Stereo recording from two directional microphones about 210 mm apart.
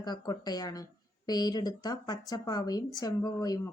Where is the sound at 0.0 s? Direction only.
20° left (ahead or behind).